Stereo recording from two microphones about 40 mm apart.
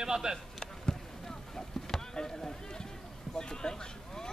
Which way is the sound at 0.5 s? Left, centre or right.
Centre.